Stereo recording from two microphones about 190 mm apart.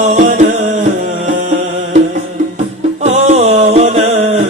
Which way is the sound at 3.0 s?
35° right (ahead or behind).